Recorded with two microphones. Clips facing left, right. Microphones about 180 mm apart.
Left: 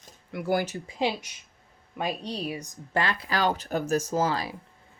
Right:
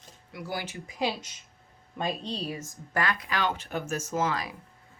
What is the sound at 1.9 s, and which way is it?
Speech, 10° left (ahead or behind).